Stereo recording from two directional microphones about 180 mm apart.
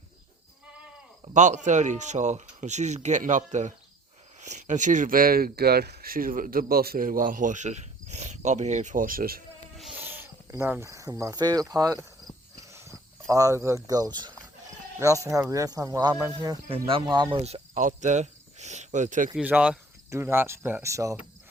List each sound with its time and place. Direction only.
1.2 s speech: 40° right (ahead or behind)
10.0 s speech: 10° right (ahead or behind)
11.7 s cricket: 20° right (ahead or behind)
14.9 s speech: 15° right (ahead or behind); by 19.3 s 45° right (ahead or behind)
19.4 s speech: 5° right (ahead or behind)